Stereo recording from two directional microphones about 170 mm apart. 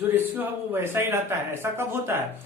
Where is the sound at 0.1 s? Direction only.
10° right (ahead or behind).